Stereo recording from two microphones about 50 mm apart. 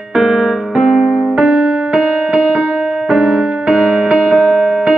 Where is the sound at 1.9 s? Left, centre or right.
Centre.